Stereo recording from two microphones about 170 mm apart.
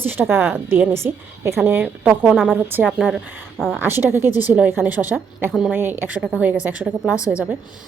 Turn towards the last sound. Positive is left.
turn(degrees=15)  # may be behind; listen again after turning